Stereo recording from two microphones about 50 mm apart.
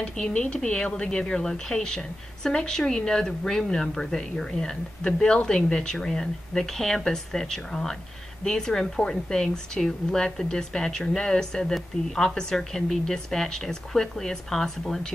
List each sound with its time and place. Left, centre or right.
0.0 s a woman's voice: left; by 15.1 s centre